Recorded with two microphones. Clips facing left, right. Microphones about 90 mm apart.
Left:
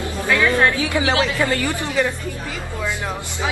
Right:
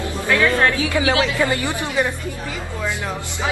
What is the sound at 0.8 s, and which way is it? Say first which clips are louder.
Speech: right 1 dB; 25° left (ahead or behind).